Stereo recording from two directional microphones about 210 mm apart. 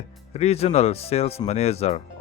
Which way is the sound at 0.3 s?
30° left (ahead or behind).